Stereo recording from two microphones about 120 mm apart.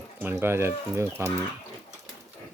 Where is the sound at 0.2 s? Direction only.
20° right (ahead or behind).